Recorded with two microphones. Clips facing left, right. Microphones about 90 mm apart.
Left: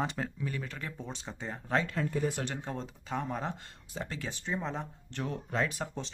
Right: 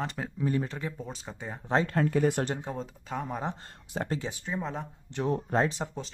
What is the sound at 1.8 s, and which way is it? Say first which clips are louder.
Speech: right 6 dB; 60° right (ahead or behind).